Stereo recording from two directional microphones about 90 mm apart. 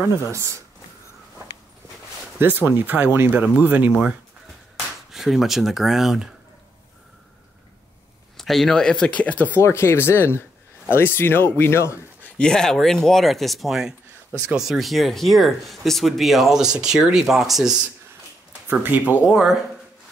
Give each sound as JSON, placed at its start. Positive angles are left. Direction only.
{"t": 0.3, "sound": "speech", "side_deg": -35}
{"t": 2.3, "sound": "speech", "side_deg": -20}
{"t": 5.1, "sound": "speech", "side_deg": -5}
{"t": 8.4, "sound": "speech", "side_deg": 5}
{"t": 9.6, "sound": "speech", "side_deg": 30}
{"t": 12.2, "sound": "speech", "side_deg": 10}
{"t": 18.7, "sound": "speech", "side_deg": -20}
{"t": 19.2, "sound": "speech", "side_deg": -10}